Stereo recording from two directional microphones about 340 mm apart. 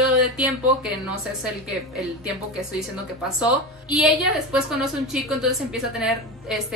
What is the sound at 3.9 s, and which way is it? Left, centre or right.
A woman's voice, centre.